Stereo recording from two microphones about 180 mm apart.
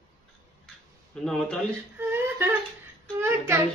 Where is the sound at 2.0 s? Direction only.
10° right (ahead or behind).